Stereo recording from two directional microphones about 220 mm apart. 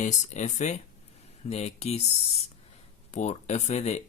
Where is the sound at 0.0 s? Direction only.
35° left (ahead or behind).